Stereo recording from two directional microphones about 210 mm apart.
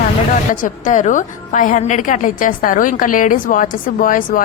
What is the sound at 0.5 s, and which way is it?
A woman's voice, 35° left (ahead or behind).